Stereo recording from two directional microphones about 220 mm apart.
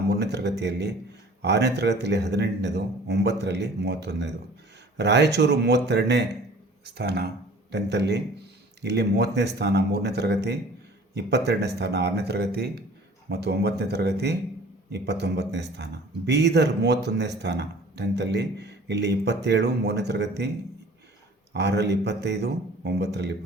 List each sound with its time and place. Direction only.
0.1 s a man's voice: 50° right (ahead or behind)
21.5 s a man's voice: 50° right (ahead or behind)